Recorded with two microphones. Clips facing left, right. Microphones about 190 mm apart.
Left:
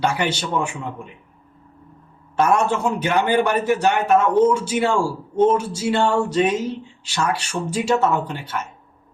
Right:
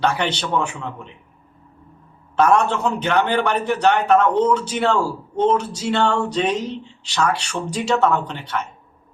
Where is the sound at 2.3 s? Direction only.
5° left (ahead or behind).